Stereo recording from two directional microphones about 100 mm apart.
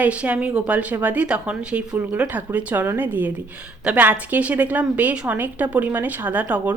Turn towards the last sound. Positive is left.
turn(degrees=-15)  # may be behind; listen again after turning